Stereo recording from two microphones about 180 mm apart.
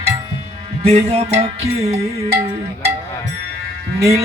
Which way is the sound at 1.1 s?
35° right (ahead or behind).